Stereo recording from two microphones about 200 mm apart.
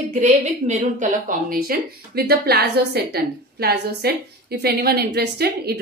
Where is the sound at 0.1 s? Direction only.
35° right (ahead or behind).